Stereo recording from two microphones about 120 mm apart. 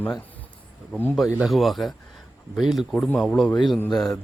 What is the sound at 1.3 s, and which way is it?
Speech, 10° right (ahead or behind).